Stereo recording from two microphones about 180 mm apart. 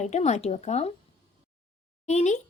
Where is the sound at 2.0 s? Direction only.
40° left (ahead or behind).